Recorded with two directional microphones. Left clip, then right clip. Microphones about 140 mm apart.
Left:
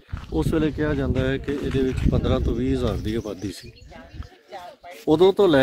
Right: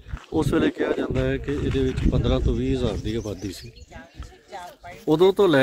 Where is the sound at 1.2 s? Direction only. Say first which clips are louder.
Even; 30° left (ahead or behind).